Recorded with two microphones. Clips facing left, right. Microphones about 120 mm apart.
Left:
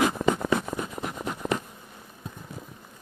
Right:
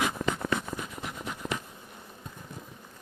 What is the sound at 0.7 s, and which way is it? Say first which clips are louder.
Writing: left 5 dB; 45° left (ahead or behind).